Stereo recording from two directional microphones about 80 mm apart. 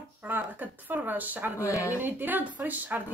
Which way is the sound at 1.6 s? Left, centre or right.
Left.